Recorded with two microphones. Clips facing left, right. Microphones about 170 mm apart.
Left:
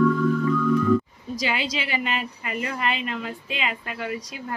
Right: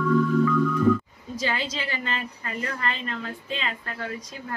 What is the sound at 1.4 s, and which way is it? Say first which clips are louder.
Speech: left 1 dB; 15° left (ahead or behind).